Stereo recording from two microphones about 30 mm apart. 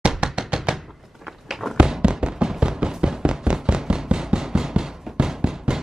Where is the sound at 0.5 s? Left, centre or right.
Right.